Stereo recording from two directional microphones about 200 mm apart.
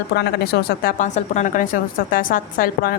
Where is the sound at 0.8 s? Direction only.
40° left (ahead or behind).